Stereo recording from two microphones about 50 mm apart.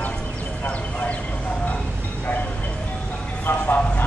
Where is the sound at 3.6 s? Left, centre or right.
Left.